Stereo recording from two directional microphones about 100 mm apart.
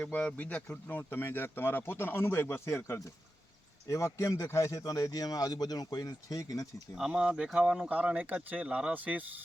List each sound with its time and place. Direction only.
0.0 s speech: 15° left (ahead or behind); by 6.8 s 35° left (ahead or behind)
6.9 s speech: 5° right (ahead or behind)